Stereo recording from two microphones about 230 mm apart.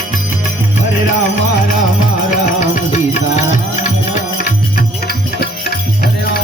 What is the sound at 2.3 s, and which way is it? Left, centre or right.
Music, left.